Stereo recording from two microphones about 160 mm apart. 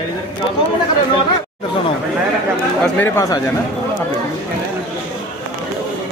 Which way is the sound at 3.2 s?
20° left (ahead or behind).